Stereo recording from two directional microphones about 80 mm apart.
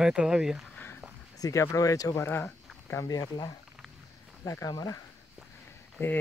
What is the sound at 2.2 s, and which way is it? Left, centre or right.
Speech, left.